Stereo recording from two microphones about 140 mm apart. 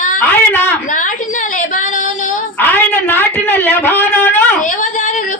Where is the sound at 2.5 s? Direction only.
15° left (ahead or behind).